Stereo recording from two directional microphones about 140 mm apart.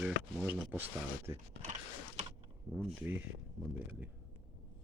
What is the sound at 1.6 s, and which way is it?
Typing, 55° right (ahead or behind).